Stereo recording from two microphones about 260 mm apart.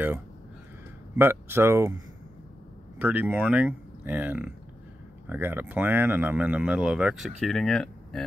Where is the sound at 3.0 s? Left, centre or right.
Centre.